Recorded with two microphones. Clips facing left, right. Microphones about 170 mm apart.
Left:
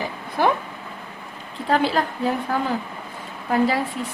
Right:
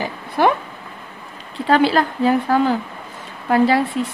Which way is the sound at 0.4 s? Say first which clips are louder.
Right 4 dB; 75° right (ahead or behind).